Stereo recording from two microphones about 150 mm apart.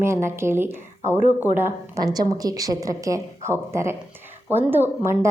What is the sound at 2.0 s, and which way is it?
A woman's voice, 25° right (ahead or behind).